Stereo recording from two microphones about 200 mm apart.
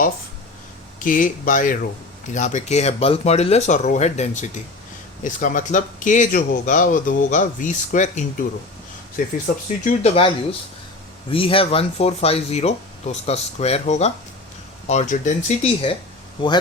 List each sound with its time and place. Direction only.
0.9 s a man's voice: 40° left (ahead or behind)
9.8 s a man's voice: 30° left (ahead or behind)